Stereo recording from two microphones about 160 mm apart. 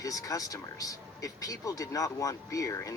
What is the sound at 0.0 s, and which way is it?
Speech, 20° left (ahead or behind).